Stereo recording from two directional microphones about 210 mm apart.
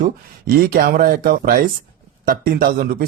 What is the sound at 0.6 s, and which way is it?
Speech, 45° right (ahead or behind).